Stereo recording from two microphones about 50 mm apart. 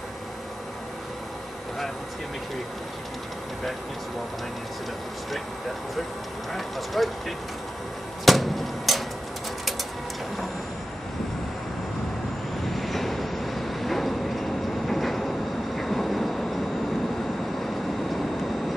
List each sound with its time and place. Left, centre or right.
6.5 s speech: centre
8.3 s a sound: centre
12.6 s train: centre